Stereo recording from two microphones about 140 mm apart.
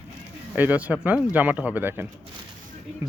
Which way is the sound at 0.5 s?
10° right (ahead or behind).